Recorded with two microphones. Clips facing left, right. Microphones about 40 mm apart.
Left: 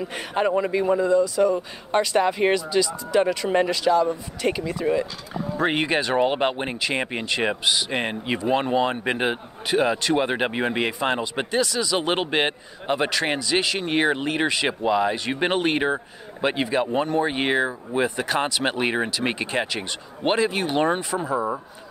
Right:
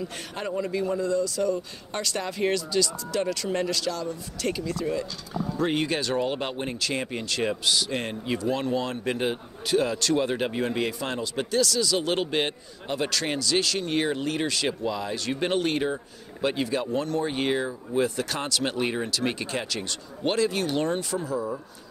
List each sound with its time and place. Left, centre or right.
0.0 s speech: left
5.6 s speech: left
11.6 s speech: left